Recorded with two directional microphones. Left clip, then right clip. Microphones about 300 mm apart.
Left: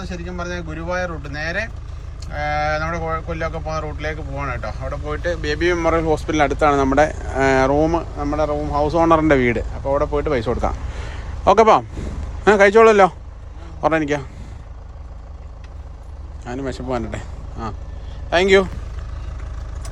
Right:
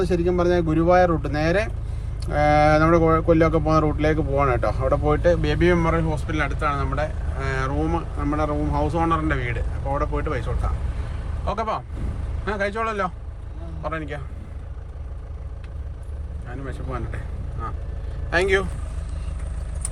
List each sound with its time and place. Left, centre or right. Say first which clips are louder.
0.0 s a man's voice: right 9 dB; centre
16.5 s speech: left 9 dB; centre
18.3 s speech: left 6 dB; centre